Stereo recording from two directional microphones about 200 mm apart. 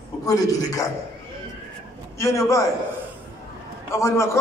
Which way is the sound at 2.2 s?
15° left (ahead or behind).